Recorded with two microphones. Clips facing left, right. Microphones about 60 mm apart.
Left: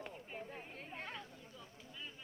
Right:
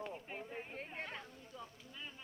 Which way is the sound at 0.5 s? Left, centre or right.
Right.